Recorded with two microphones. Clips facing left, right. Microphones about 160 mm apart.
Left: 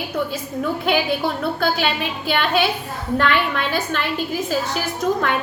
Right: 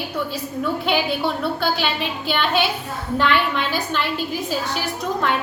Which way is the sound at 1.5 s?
50° left (ahead or behind).